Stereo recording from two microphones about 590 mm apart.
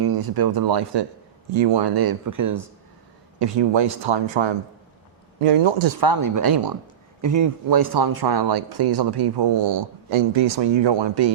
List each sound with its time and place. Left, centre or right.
0.0 s speech: right
3.3 s speech: right
6.0 s speech: right